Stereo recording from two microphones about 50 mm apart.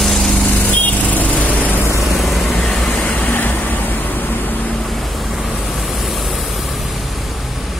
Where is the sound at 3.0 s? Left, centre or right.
Left.